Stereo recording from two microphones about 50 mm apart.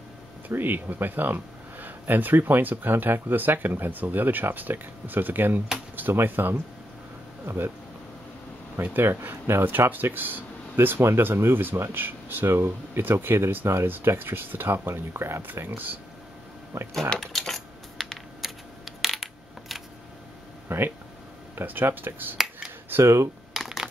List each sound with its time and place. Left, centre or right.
0.5 s speech: right
7.4 s speech: right
8.8 s speech: right
15.4 s speech: right
17.2 s typing: centre
19.7 s a sound: centre
20.6 s a sound: right
21.5 s speech: right
23.5 s shuffling cards: centre